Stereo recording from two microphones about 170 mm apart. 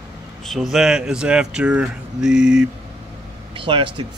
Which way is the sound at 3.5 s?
30° right (ahead or behind).